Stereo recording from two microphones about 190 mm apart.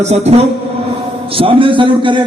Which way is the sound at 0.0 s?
35° right (ahead or behind).